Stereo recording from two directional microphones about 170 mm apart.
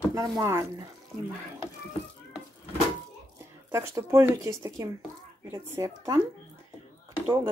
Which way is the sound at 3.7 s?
15° right (ahead or behind).